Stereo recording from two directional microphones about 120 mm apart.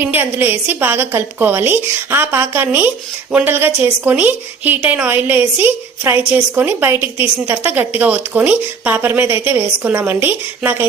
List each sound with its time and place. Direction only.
0.0 s a woman's voice: 15° right (ahead or behind)